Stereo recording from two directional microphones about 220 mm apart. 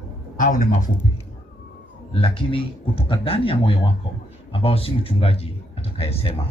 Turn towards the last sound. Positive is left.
turn(degrees=25)  # may be behind; listen again after turning